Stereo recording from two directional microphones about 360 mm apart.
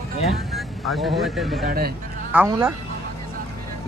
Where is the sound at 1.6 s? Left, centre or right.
Right.